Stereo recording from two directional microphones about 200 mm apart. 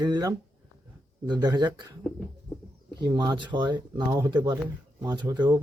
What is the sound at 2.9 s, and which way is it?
Speech, 20° right (ahead or behind).